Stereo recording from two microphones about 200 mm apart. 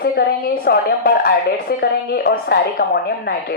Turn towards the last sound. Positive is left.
turn(degrees=50)  # may be behind; listen again after turning